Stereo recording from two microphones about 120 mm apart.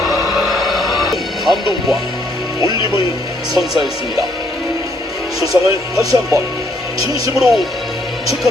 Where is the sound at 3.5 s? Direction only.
5° right (ahead or behind).